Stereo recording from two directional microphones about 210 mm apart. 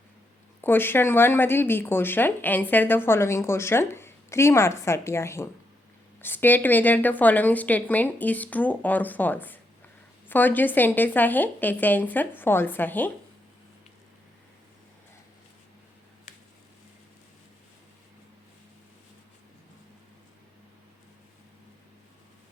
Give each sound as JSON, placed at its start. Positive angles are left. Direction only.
{"t": 0.6, "sound": "speech", "side_deg": 10}